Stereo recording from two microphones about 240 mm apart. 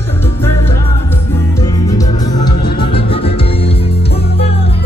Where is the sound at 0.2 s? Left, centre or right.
Centre.